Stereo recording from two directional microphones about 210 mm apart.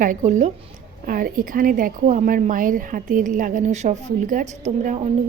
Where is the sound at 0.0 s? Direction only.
35° right (ahead or behind).